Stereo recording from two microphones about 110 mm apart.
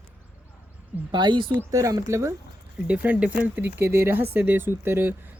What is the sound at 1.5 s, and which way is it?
Speech, 25° right (ahead or behind).